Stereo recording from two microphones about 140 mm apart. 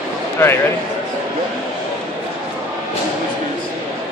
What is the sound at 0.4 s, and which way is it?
Speech, 15° left (ahead or behind).